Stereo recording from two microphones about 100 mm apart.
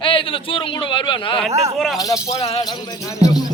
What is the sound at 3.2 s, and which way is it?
Speech, 40° left (ahead or behind).